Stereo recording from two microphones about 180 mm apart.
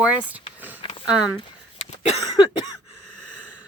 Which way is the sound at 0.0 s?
5° right (ahead or behind).